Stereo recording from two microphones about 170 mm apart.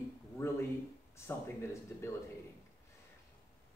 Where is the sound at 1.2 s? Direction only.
15° left (ahead or behind).